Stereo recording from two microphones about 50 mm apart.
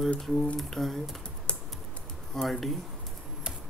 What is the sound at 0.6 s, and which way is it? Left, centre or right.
Speech, centre.